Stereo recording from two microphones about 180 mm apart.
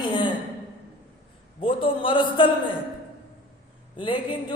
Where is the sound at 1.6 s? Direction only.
30° left (ahead or behind).